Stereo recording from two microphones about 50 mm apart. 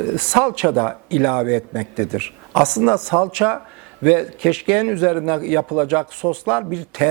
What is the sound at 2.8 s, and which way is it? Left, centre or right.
Speech, right.